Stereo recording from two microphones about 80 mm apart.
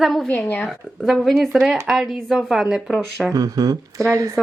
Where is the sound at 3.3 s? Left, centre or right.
Right.